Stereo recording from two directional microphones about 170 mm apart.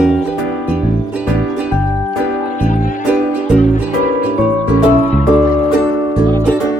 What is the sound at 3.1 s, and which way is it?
Music, 5° right (ahead or behind).